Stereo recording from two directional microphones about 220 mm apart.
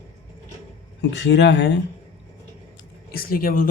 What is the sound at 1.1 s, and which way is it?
Speech, 50° left (ahead or behind).